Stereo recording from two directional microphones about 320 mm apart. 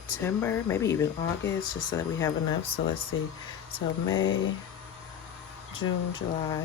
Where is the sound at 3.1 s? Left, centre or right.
Left.